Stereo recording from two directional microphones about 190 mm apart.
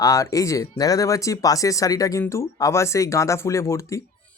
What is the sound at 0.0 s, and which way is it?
Speech, 15° left (ahead or behind).